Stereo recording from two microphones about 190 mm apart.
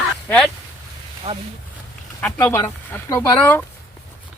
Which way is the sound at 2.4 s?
15° left (ahead or behind).